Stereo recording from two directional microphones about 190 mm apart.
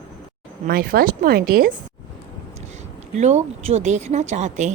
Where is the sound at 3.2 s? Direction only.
35° right (ahead or behind).